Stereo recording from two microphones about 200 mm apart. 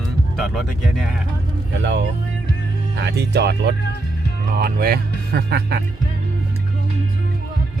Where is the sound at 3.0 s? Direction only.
55° right (ahead or behind).